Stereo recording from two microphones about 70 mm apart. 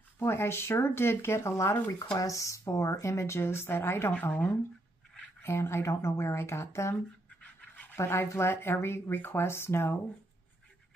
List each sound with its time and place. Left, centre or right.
0.2 s speech: left
2.1 s speech: left
4.1 s speech: left
5.4 s speech: left
7.2 s a sound: centre
8.0 s speech: left